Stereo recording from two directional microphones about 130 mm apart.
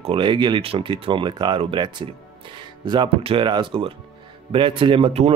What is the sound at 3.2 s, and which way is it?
Speech, 45° right (ahead or behind).